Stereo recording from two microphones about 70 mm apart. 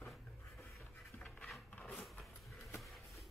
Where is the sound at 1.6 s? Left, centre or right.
Left.